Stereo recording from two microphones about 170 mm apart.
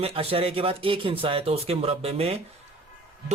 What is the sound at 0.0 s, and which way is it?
Speech, 35° right (ahead or behind).